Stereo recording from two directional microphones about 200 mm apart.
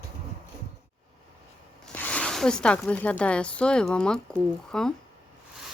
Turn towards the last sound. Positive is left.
turn(degrees=5)  # may be behind; listen again after turning